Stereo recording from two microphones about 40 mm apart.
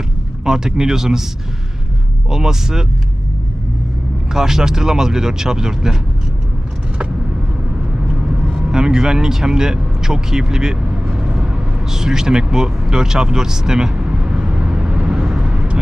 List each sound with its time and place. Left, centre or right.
0.4 s speech: centre
2.3 s speech: centre
4.3 s speech: centre
8.7 s speech: centre
15.1 s vehicle: centre
15.4 s vehicle: right